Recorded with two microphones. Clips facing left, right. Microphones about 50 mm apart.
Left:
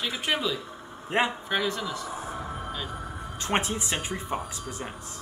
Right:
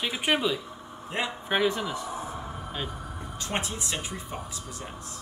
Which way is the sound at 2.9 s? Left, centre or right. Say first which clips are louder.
Left 2 dB; left.